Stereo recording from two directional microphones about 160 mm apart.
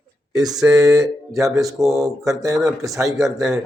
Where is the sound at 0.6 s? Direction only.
20° right (ahead or behind).